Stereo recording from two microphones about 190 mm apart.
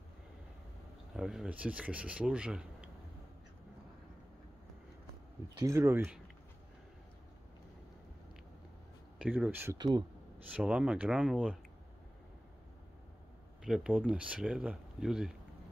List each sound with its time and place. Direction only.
1.1 s speech: 5° right (ahead or behind)
5.6 s speech: 15° right (ahead or behind)
9.2 s speech: 10° right (ahead or behind)
9.8 s speech: 20° right (ahead or behind)
10.5 s speech: 5° right (ahead or behind)
13.7 s speech: 5° right (ahead or behind)